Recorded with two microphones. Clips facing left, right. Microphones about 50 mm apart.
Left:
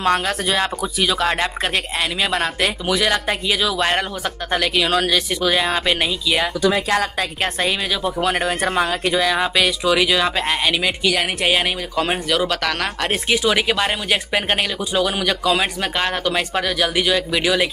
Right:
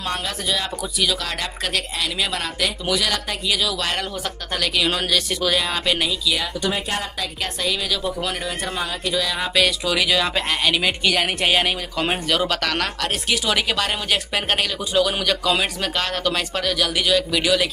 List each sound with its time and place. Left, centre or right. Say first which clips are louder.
0.0 s speech: left 8 dB; left
0.9 s speech: left 5 dB; left
4.8 s speech: left 3 dB; centre
6.4 s speech: left 6 dB; left
7.2 s speech: left 5 dB; left
7.9 s speech: left 3 dB; left
8.4 s speech: left 7 dB; left
9.4 s speech: left 2 dB; centre
10.7 s speech: left 1 dB; centre
12.8 s speech: left 3 dB; left